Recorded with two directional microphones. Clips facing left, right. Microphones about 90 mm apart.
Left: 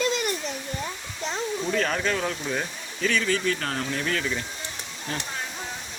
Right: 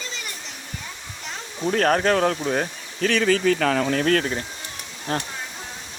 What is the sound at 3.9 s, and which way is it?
Speech, 70° right (ahead or behind).